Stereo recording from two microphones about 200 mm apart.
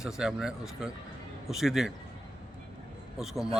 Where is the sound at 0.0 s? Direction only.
5° right (ahead or behind).